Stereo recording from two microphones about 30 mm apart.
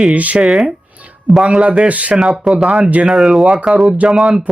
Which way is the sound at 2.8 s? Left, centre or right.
Right.